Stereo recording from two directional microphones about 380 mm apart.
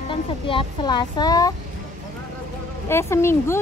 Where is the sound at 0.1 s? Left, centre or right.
Centre.